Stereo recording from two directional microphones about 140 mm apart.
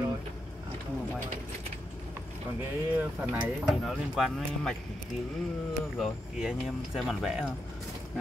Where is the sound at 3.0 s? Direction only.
15° right (ahead or behind).